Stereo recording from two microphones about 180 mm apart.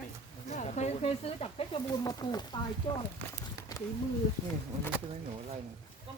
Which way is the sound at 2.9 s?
30° left (ahead or behind).